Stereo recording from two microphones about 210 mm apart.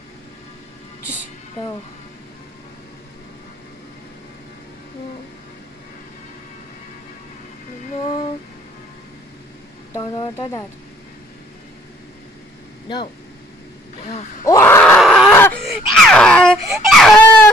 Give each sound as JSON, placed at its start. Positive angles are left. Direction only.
{"t": 9.9, "sound": "a sound", "side_deg": 20}
{"t": 12.8, "sound": "speech", "side_deg": 20}
{"t": 14.4, "sound": "groan", "side_deg": 15}
{"t": 16.8, "sound": "baby cry", "side_deg": 0}